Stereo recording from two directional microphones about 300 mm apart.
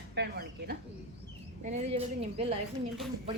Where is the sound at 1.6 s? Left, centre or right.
Right.